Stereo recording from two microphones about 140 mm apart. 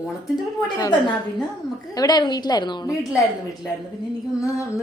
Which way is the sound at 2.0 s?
30° left (ahead or behind).